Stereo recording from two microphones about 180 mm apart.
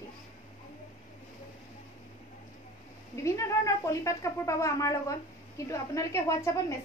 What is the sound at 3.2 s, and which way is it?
A woman's voice, 15° left (ahead or behind).